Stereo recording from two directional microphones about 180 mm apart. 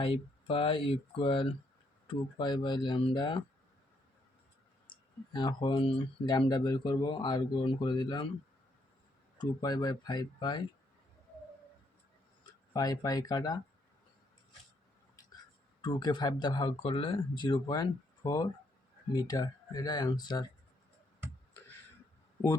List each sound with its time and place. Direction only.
0.0 s speech: 30° left (ahead or behind)
4.9 s speech: 25° left (ahead or behind)
9.4 s speech: 20° left (ahead or behind)
12.4 s speech: 20° left (ahead or behind)
15.8 s speech: 25° left (ahead or behind)